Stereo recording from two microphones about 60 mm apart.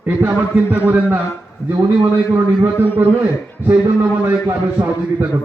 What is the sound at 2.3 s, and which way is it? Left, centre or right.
A man's voice, right.